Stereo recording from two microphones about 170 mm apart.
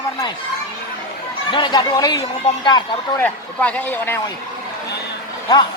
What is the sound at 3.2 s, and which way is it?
Speech, 10° left (ahead or behind).